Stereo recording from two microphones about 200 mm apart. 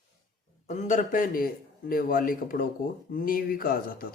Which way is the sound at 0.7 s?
40° left (ahead or behind).